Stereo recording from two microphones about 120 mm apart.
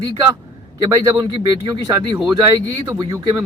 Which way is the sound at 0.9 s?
25° right (ahead or behind).